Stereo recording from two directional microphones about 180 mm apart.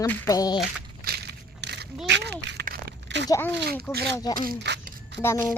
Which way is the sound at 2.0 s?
80° right.